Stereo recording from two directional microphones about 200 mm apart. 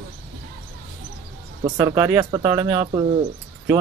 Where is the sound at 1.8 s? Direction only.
15° right (ahead or behind).